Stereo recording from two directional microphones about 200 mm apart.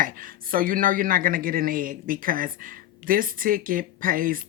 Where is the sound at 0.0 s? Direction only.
45° right (ahead or behind).